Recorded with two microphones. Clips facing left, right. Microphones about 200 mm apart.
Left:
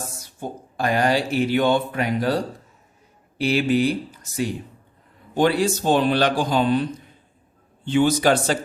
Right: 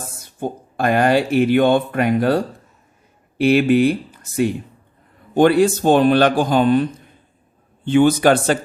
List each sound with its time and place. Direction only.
0.2 s a man's voice: 55° right (ahead or behind)
7.9 s speech: 55° right (ahead or behind)